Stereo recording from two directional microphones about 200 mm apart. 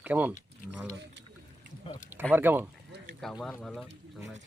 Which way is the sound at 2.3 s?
10° right (ahead or behind).